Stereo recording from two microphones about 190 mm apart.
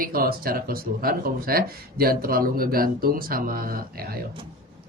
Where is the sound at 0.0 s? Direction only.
50° right (ahead or behind).